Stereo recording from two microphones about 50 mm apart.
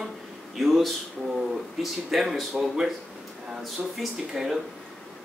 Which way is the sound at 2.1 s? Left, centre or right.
Centre.